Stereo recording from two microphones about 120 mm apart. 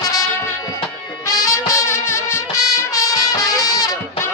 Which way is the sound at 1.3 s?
30° left (ahead or behind).